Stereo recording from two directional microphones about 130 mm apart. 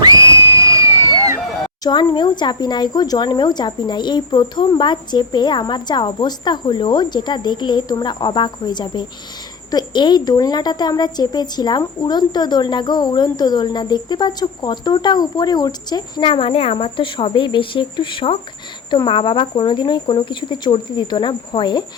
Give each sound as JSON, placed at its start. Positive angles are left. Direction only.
{"t": 0.0, "sound": "crowd", "side_deg": -25}
{"t": 1.8, "sound": "a woman's voice", "side_deg": 35}